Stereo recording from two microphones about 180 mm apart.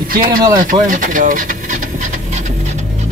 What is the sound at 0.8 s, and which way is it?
Pant, 45° right (ahead or behind).